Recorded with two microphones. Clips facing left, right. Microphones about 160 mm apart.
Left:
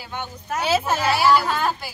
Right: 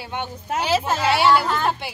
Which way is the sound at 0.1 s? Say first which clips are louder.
Right 2 dB; 25° right (ahead or behind).